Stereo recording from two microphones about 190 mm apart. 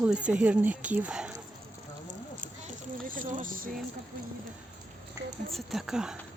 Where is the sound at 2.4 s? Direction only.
45° right (ahead or behind).